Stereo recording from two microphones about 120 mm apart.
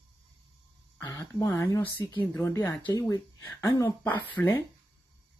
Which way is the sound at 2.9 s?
30° left (ahead or behind).